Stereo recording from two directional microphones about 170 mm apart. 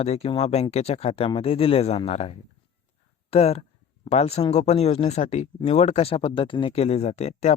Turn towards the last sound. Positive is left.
turn(degrees=40)  # may be behind; listen again after turning